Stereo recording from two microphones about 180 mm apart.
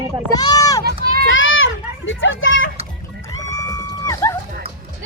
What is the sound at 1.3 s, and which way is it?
Children playing, 90° left.